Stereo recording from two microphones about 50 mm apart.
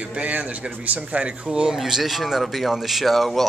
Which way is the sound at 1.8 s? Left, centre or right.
Centre.